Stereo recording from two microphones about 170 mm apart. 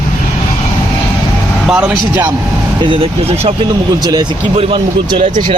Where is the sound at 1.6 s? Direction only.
5° right (ahead or behind).